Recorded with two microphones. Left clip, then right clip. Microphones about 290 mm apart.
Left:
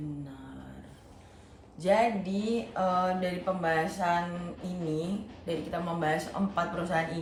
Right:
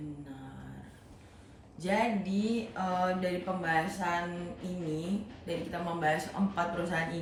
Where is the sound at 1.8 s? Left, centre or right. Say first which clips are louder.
Left 5 dB; centre.